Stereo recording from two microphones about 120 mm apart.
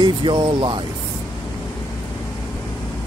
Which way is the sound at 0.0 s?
40° right (ahead or behind).